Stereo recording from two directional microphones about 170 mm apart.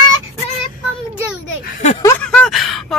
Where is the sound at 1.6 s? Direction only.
45° left (ahead or behind).